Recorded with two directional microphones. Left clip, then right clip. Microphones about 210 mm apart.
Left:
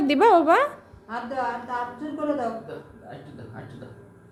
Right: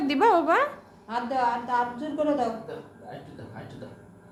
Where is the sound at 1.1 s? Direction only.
40° right (ahead or behind).